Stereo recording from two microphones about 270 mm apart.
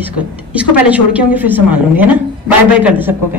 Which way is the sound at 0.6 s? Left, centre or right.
Centre.